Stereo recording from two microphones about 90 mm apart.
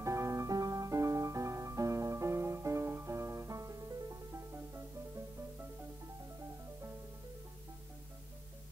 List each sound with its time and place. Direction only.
0.0 s music: 35° right (ahead or behind)